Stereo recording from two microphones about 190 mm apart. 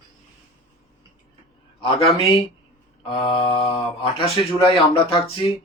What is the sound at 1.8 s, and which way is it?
Speech, 25° left (ahead or behind).